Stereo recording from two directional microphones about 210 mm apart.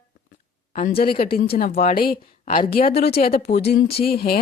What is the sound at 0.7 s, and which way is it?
Speech, 35° left (ahead or behind).